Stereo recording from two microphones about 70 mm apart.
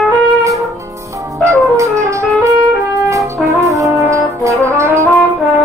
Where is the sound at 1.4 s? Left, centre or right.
Right.